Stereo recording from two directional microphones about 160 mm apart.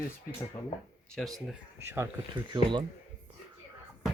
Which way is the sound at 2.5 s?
30° right (ahead or behind).